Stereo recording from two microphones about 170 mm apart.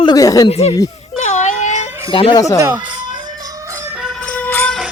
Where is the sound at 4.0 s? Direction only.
Centre (ahead or behind).